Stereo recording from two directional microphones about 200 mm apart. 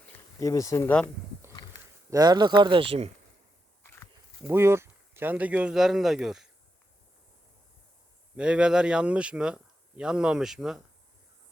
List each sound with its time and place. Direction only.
0.3 s speech: 15° left (ahead or behind)
1.4 s a sound: 15° right (ahead or behind)
2.0 s speech: 20° right (ahead or behind)
4.4 s speech: 10° right (ahead or behind)
8.4 s speech: 5° right (ahead or behind)